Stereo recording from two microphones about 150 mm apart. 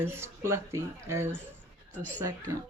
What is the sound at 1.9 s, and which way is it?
Speech, 10° left (ahead or behind).